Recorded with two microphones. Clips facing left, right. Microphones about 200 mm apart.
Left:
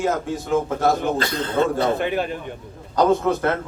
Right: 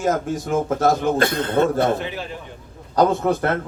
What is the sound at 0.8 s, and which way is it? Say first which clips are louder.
A man's voice: right 2 dB; 50° right (ahead or behind).